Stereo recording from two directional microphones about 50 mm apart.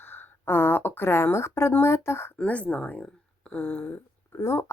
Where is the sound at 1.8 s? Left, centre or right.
Left.